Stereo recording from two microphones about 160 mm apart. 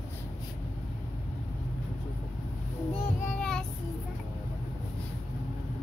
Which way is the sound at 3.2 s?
5° left (ahead or behind).